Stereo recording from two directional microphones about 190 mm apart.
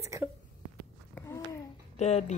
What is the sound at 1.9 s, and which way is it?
Speech, 35° left (ahead or behind).